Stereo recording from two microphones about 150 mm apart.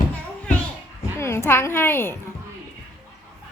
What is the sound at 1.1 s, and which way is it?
A woman's voice, 15° left (ahead or behind).